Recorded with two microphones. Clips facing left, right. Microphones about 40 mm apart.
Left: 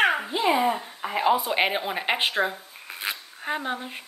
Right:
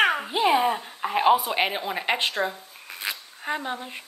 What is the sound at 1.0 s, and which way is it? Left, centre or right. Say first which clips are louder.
Speech: right 3 dB; right.